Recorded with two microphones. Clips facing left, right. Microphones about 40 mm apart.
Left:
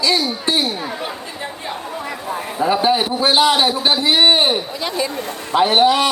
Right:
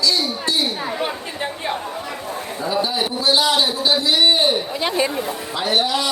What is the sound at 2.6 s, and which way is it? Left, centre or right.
A man's voice, left.